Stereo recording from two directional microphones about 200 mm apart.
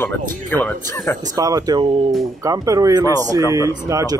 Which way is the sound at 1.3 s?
20° right (ahead or behind).